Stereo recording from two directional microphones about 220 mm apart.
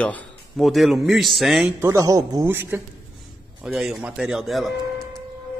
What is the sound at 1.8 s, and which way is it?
A man's voice, 15° right (ahead or behind).